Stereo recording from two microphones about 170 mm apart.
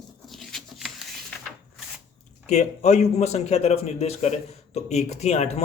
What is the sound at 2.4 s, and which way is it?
Speech, 40° left (ahead or behind).